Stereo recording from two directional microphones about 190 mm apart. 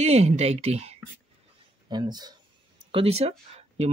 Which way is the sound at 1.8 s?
20° right (ahead or behind).